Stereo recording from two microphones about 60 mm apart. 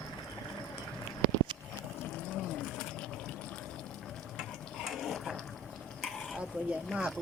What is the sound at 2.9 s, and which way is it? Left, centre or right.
Fill, centre.